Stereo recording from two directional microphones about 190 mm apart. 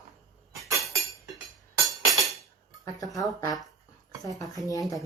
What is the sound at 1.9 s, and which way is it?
Music, centre (ahead or behind).